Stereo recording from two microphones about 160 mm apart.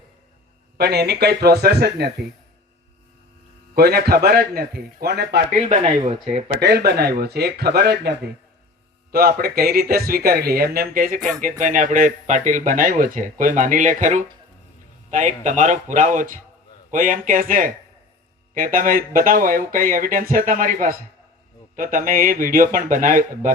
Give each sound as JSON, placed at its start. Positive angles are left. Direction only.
{"t": 0.8, "sound": "speech", "side_deg": -90}
{"t": 3.8, "sound": "speech", "side_deg": -80}
{"t": 5.5, "sound": "speech", "side_deg": -50}
{"t": 6.6, "sound": "speech", "side_deg": -85}
{"t": 9.1, "sound": "speech", "side_deg": -70}